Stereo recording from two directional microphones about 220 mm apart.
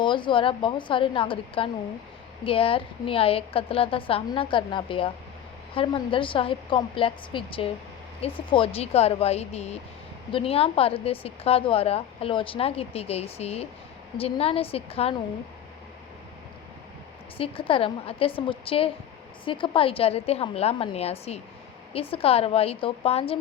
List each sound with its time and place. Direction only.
0.0 s a woman's voice: 20° left (ahead or behind)
17.3 s a woman's voice: 25° left (ahead or behind)